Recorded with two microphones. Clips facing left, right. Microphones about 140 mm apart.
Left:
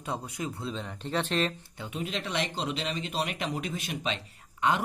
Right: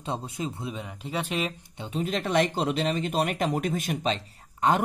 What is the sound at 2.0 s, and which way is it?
Speech, 45° right (ahead or behind).